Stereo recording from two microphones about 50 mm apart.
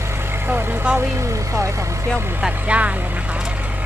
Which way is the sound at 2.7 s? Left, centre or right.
Right.